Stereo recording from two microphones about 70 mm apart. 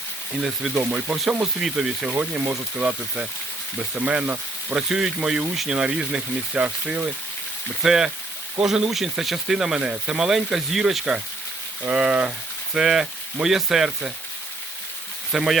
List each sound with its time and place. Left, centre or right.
0.4 s speech: centre
7.8 s speech: centre
15.3 s speech: centre